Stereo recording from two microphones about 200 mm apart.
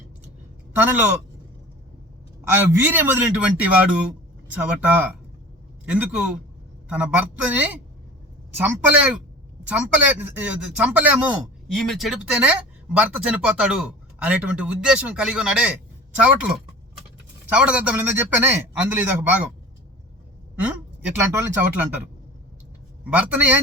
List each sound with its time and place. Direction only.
0.8 s speech: 10° right (ahead or behind)
2.7 s a man's voice: 10° right (ahead or behind)
17.5 s speech: 5° right (ahead or behind)
20.6 s speech: 5° right (ahead or behind)
23.0 s speech: 5° right (ahead or behind)